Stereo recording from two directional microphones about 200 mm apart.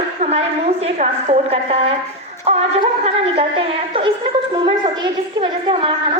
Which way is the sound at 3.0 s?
30° right (ahead or behind).